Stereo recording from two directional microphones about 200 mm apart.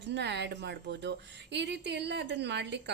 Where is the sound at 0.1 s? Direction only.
60° right (ahead or behind).